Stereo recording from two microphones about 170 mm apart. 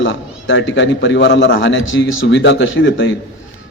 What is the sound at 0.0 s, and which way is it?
Speech, 90° left.